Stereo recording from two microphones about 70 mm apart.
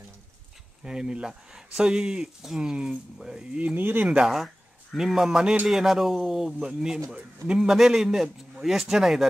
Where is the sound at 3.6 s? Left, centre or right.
Centre.